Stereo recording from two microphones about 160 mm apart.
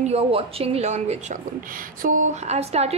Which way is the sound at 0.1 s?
40° right (ahead or behind).